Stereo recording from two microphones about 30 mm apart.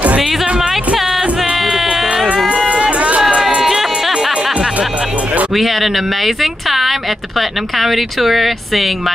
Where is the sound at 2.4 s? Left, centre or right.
Right.